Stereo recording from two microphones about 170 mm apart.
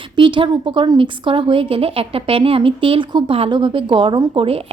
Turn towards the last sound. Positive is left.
turn(degrees=-30)  # may be behind; listen again after turning